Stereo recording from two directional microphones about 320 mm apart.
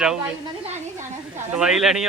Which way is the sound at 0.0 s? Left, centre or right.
Centre.